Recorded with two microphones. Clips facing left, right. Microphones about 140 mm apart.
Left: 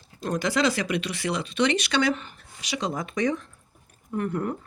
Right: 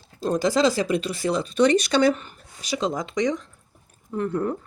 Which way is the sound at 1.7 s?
40° right (ahead or behind).